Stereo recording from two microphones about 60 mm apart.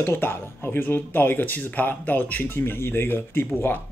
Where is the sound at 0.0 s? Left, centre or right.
Left.